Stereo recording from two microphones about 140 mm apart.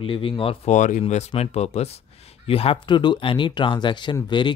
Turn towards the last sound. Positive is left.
turn(degrees=35)  # may be behind; listen again after turning